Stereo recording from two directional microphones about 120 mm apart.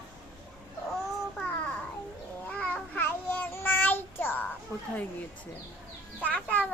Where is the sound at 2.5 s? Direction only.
10° left (ahead or behind).